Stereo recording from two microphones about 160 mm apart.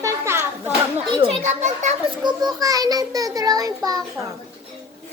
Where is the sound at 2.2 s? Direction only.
25° right (ahead or behind).